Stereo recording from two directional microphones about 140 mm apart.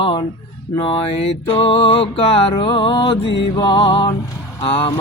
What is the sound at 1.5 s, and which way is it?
Music, 45° left (ahead or behind).